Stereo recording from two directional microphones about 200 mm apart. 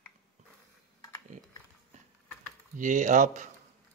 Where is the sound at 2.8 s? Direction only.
40° right (ahead or behind).